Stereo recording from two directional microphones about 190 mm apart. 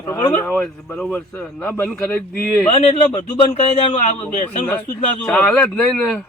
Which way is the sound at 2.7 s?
30° left (ahead or behind).